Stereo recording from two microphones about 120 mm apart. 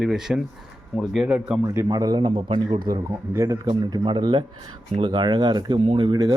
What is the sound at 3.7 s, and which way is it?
A man's voice, 40° right (ahead or behind).